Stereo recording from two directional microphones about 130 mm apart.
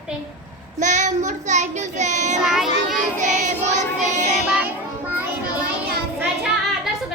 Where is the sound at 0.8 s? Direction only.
70° right (ahead or behind).